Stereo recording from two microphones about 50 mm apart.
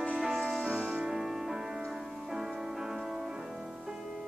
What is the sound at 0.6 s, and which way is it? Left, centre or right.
Music, centre.